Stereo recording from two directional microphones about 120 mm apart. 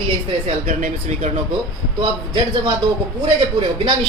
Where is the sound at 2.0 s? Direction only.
45° right (ahead or behind).